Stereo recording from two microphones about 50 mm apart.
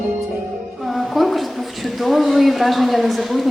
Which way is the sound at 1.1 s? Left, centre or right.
Centre.